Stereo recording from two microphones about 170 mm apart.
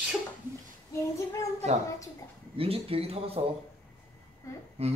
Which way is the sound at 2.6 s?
35° right (ahead or behind).